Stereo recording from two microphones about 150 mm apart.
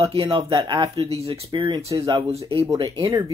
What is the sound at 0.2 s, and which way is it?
Speech, 25° right (ahead or behind).